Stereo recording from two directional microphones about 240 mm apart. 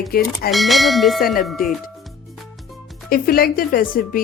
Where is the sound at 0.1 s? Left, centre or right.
Left.